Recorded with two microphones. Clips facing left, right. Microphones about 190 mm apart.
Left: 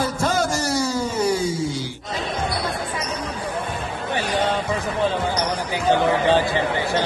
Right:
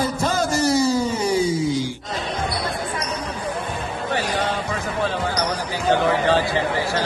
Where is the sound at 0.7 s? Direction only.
10° right (ahead or behind).